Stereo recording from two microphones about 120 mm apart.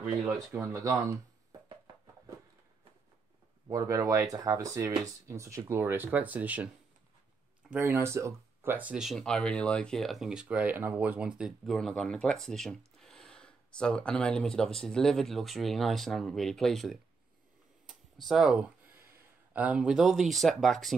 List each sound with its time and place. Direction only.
0.5 s speech: 25° right (ahead or behind)
3.6 s speech: 30° right (ahead or behind); by 6.7 s 10° right (ahead or behind)
7.7 s speech: 20° right (ahead or behind); by 18.7 s 5° right (ahead or behind)
18.9 s speech: 20° right (ahead or behind); by 20.9 s centre (ahead or behind)